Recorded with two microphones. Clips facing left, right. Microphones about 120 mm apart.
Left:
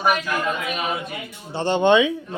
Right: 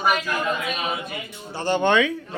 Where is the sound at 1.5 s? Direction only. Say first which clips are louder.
Left 3 dB; 25° left (ahead or behind).